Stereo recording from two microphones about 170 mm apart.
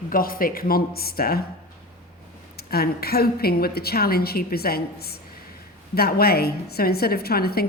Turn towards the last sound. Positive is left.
turn(degrees=65)  # may be behind; listen again after turning